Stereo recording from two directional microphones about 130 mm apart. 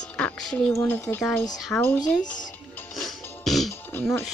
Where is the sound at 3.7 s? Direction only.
15° left (ahead or behind).